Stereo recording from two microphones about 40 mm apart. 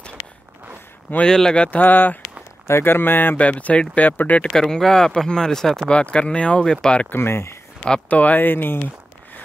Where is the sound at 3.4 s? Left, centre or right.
Left.